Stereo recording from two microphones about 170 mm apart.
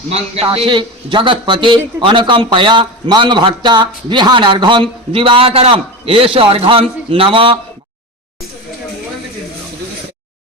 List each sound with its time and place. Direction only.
0.1 s a man's voice: 35° right (ahead or behind)